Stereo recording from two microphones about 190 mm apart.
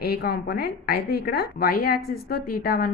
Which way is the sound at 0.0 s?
55° left (ahead or behind).